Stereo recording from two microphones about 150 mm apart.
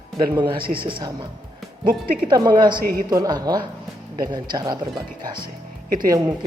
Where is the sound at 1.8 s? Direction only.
75° right (ahead or behind).